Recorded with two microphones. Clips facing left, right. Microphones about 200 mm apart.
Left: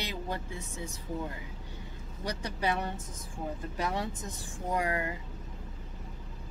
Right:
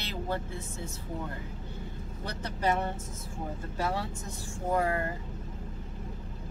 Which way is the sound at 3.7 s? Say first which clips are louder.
Right 2 dB; 15° left (ahead or behind).